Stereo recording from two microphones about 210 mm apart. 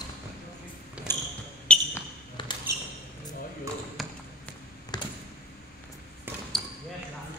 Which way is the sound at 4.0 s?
Centre (ahead or behind).